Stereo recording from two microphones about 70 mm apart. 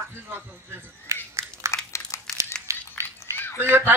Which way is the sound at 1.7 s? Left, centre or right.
Left.